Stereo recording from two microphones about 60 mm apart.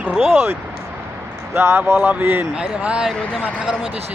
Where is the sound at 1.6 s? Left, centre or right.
Right.